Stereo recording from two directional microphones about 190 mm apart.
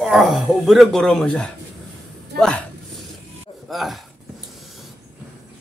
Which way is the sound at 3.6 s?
Centre (ahead or behind).